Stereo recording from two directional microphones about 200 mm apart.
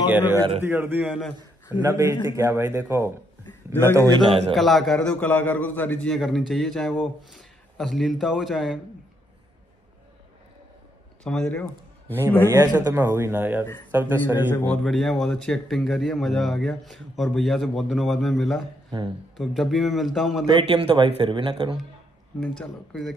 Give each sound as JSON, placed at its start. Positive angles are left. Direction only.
{"t": 0.1, "sound": "a man's voice", "side_deg": -10}
{"t": 1.8, "sound": "a man's voice", "side_deg": -15}
{"t": 4.1, "sound": "speech", "side_deg": -25}
{"t": 4.6, "sound": "a man's voice", "side_deg": 0}
{"t": 11.2, "sound": "a man's voice", "side_deg": 5}
{"t": 12.4, "sound": "a man's voice", "side_deg": -10}
{"t": 14.5, "sound": "a man's voice", "side_deg": 10}
{"t": 20.4, "sound": "speech", "side_deg": -20}
{"t": 22.4, "sound": "a man's voice", "side_deg": 5}